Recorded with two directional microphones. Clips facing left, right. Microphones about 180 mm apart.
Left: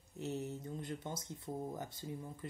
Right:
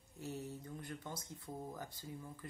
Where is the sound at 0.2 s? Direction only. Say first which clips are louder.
Left 5 dB; 20° left (ahead or behind).